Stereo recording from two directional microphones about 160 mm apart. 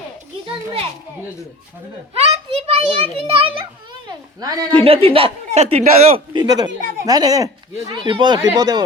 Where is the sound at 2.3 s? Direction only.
40° right (ahead or behind).